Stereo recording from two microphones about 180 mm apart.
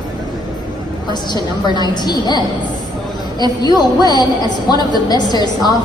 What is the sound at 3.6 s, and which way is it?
A woman's voice, 20° left (ahead or behind).